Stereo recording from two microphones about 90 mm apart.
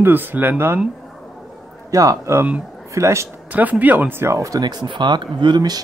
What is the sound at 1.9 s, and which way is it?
Speech, 35° right (ahead or behind).